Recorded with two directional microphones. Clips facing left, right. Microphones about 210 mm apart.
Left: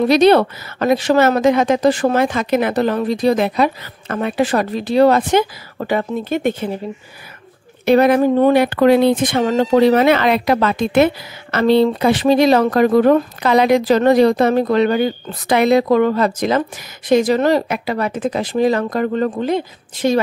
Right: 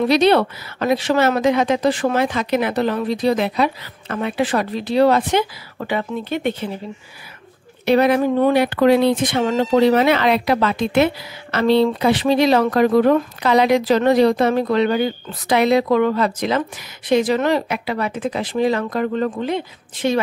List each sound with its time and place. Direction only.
0.1 s speech: 45° left (ahead or behind)
7.8 s speech: 50° left (ahead or behind)